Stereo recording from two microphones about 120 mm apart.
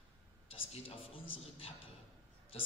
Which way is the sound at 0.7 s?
50° left (ahead or behind).